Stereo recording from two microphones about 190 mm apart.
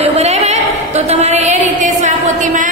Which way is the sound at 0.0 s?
35° right (ahead or behind).